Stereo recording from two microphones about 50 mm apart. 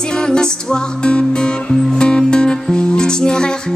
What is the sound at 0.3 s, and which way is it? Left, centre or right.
Music, centre.